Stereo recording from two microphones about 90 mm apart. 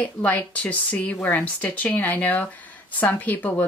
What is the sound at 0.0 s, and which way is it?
Speech, 15° left (ahead or behind).